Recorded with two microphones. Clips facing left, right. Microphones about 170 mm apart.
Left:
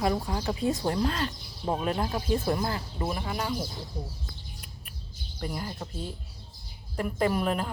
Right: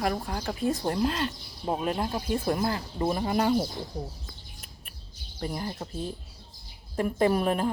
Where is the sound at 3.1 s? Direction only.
35° right (ahead or behind).